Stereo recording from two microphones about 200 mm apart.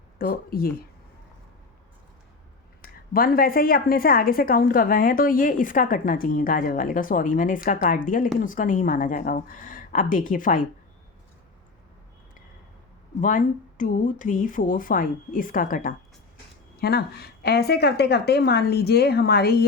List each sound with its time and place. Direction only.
0.2 s speech: 50° left (ahead or behind)
2.8 s a woman's voice: 45° left (ahead or behind)
13.2 s a woman's voice: 40° left (ahead or behind)